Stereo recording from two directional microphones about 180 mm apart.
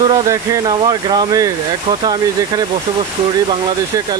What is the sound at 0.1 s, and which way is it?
Speech, 20° right (ahead or behind).